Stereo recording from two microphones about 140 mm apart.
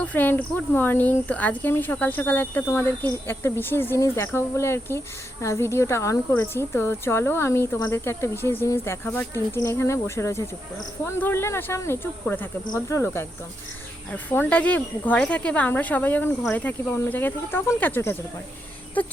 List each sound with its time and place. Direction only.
0.0 s speech: 10° left (ahead or behind)